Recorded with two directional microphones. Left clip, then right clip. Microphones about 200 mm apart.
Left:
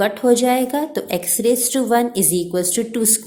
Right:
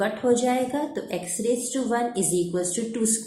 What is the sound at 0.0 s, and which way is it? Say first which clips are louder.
A woman's voice: left 7 dB; 50° left (ahead or behind).